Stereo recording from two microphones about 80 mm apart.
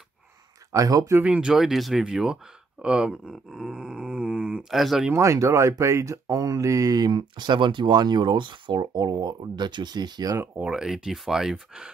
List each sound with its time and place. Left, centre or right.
0.7 s speech: right
1.2 s speech: centre
4.7 s speech: centre
5.1 s speech: right
7.1 s speech: right
10.3 s speech: right
10.6 s speech: centre